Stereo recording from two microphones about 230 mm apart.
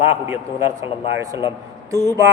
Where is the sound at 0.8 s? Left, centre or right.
Centre.